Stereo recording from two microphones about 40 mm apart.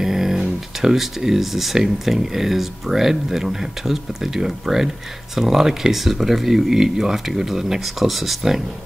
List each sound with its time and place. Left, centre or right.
0.0 s speech: centre